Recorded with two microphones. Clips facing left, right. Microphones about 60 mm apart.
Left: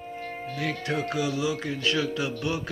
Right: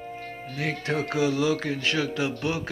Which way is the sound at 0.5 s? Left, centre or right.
Right.